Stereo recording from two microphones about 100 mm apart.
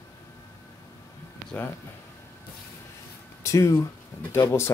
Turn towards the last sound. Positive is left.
turn(degrees=25)  # may be behind; listen again after turning